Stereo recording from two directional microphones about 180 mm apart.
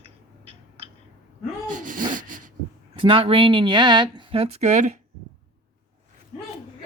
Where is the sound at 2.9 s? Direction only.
30° right (ahead or behind).